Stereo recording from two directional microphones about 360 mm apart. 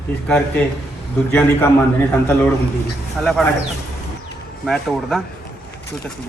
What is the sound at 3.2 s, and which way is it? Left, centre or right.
Speech, centre.